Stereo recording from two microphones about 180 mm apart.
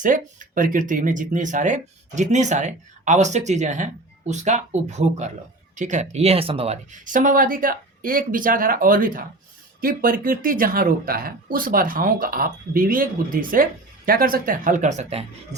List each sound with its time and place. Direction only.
0.0 s speech: 45° right (ahead or behind)